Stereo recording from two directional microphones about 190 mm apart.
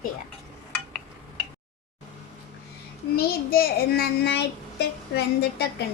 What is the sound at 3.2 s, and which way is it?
A child's voice, 50° left (ahead or behind).